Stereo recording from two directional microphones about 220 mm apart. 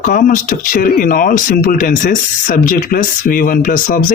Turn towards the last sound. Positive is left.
turn(degrees=40)  # may be behind; listen again after turning